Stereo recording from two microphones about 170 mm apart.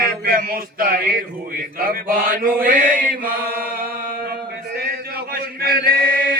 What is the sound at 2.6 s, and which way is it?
Chant, 55° right (ahead or behind).